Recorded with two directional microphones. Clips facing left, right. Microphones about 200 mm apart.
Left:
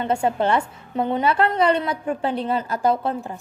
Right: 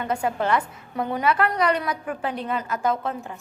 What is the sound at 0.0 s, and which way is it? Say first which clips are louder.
A woman's voice: left 4 dB; 30° left (ahead or behind).